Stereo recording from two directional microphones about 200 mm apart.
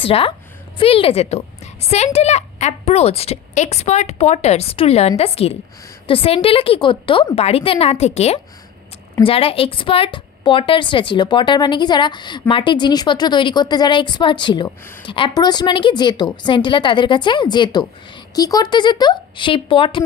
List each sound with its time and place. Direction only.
0.0 s a woman's voice: 25° left (ahead or behind)